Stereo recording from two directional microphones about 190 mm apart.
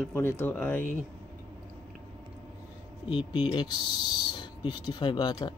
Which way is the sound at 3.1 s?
25° left (ahead or behind).